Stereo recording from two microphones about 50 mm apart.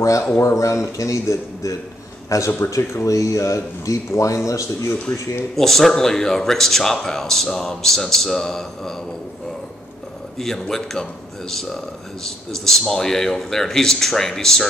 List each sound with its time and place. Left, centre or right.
0.0 s speech: left
5.6 s speech: centre
10.4 s speech: centre